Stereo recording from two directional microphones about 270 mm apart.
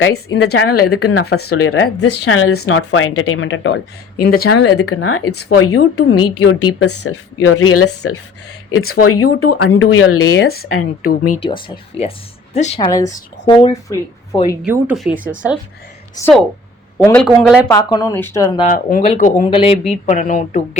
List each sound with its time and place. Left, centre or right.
0.0 s speech: left
0.7 s a woman's voice: left
10.7 s a woman's voice: left
11.3 s speech: centre
13.1 s speech: left
14.6 s speech: centre
16.2 s speech: centre
17.2 s speech: centre
17.7 s speech: centre
18.6 s speech: left